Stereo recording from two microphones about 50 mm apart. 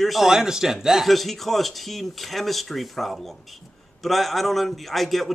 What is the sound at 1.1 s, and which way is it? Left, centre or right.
Speech, centre.